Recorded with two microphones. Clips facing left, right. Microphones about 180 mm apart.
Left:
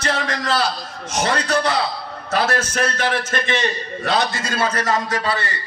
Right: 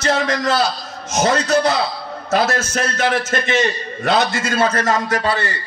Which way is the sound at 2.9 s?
45° right (ahead or behind).